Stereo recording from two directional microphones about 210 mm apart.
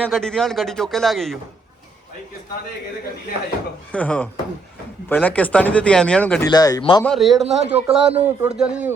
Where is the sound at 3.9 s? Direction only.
5° left (ahead or behind).